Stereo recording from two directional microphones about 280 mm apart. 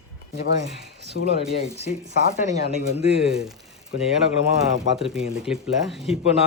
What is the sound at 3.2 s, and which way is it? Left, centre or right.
Speech, centre.